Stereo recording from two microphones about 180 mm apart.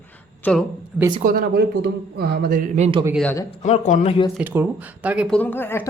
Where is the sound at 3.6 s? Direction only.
40° left (ahead or behind).